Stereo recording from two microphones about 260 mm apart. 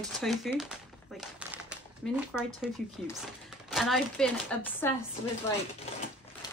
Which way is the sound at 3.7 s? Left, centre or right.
Centre.